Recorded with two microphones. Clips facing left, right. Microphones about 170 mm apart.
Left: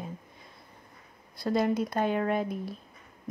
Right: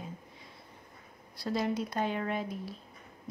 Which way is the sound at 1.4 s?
50° left (ahead or behind).